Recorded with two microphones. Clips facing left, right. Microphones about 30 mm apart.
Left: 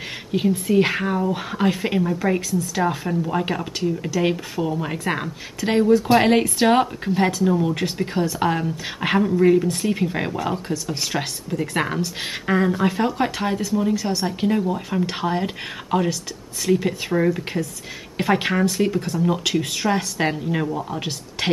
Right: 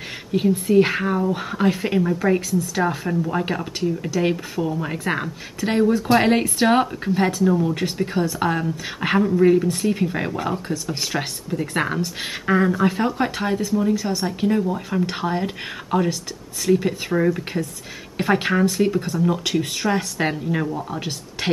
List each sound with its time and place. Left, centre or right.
0.3 s speech: centre